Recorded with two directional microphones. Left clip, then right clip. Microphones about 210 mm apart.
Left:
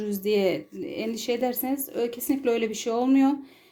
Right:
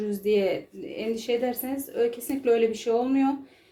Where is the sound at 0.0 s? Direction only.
45° left (ahead or behind).